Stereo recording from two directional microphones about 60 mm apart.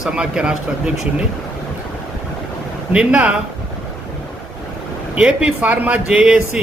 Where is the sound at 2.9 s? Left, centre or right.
Centre.